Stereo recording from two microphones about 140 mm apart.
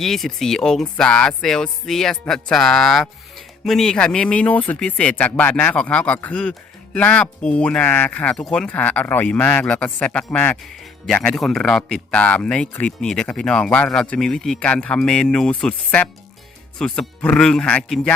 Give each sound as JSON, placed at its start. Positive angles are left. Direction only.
{"t": 0.0, "sound": "speech", "side_deg": 0}